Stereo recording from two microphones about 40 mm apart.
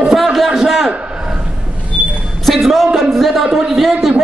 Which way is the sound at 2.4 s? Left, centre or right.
Centre.